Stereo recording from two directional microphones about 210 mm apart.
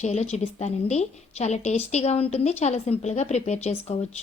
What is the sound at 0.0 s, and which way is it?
Speech, 30° left (ahead or behind).